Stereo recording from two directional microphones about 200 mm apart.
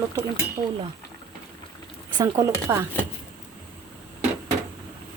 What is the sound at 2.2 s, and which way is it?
Speech, 15° right (ahead or behind).